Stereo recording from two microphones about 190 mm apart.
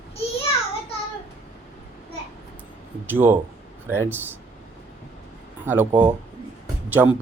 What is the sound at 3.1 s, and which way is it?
Speech, 10° right (ahead or behind).